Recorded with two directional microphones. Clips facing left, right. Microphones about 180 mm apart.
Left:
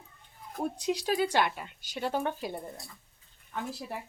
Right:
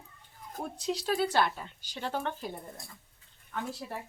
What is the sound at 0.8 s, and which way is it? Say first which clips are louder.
Speech: even; 10° left (ahead or behind).